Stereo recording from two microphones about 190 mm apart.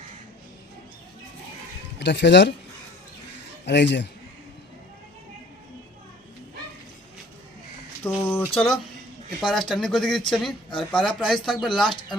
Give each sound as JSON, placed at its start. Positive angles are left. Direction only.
{"t": 2.0, "sound": "speech", "side_deg": 65}
{"t": 3.7, "sound": "a man's voice", "side_deg": 65}
{"t": 8.0, "sound": "a sound", "side_deg": 5}
{"t": 9.5, "sound": "speech", "side_deg": 0}